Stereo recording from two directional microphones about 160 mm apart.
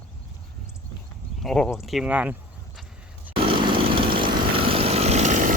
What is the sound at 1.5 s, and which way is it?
Speech, 5° left (ahead or behind).